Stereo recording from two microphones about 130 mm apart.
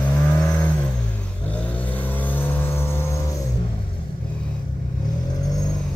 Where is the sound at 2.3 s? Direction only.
15° left (ahead or behind).